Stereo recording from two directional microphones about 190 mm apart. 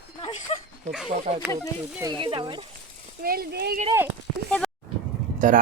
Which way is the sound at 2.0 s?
25° right (ahead or behind).